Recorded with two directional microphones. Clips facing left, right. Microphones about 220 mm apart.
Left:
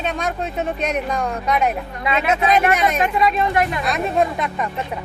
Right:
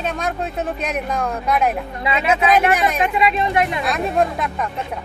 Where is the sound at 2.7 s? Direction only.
Centre (ahead or behind).